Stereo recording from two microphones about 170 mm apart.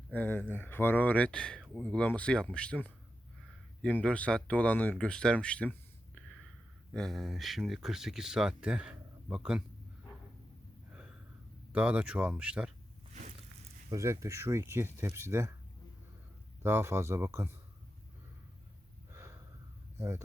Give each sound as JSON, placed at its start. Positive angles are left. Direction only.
{"t": 0.1, "sound": "speech", "side_deg": 10}
{"t": 6.9, "sound": "speech", "side_deg": 0}
{"t": 10.9, "sound": "a sound", "side_deg": -5}
{"t": 11.7, "sound": "speech", "side_deg": -5}
{"t": 13.9, "sound": "speech", "side_deg": -15}
{"t": 16.6, "sound": "speech", "side_deg": -15}
{"t": 19.1, "sound": "snort", "side_deg": -15}
{"t": 20.0, "sound": "speech", "side_deg": -15}